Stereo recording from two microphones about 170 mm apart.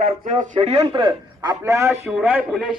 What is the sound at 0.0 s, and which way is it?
Speech, 50° right (ahead or behind).